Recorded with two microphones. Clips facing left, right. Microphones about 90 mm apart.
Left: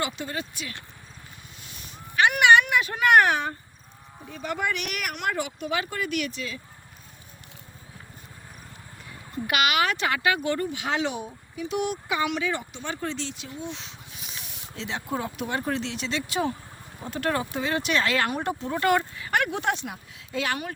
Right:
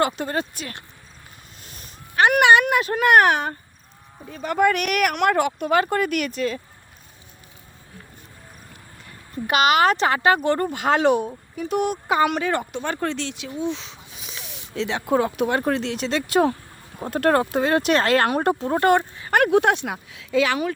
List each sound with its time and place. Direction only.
0.0 s speech: 50° right (ahead or behind)
9.5 s speech: 35° right (ahead or behind); by 13.5 s 75° right (ahead or behind)
14.3 s speech: 90° right; by 19.4 s 35° right (ahead or behind)
19.4 s speech: 60° right (ahead or behind); by 20.7 s 90° right